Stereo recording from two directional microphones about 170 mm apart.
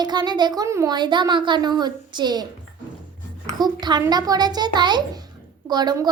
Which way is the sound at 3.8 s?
25° right (ahead or behind).